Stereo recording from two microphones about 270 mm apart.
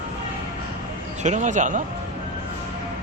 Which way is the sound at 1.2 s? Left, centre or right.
Right.